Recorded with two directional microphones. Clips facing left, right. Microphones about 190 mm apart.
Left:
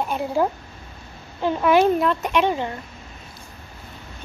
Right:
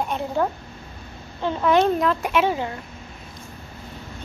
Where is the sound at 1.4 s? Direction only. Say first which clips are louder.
Left 2 dB; 10° left (ahead or behind).